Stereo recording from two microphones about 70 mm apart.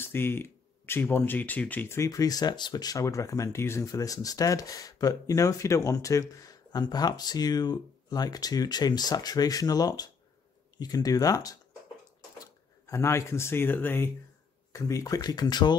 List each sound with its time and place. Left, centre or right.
0.0 s speech: left
1.9 s speech: left
3.0 s speech: left
3.8 s speech: left
6.7 s speech: left
12.9 s speech: left
14.7 s speech: left